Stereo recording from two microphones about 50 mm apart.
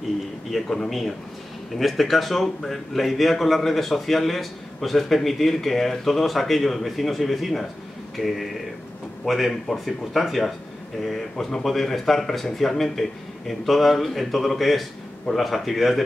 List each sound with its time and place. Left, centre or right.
0.5 s a man's voice: centre